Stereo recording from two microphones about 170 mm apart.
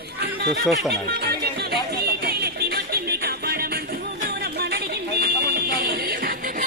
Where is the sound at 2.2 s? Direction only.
65° right (ahead or behind).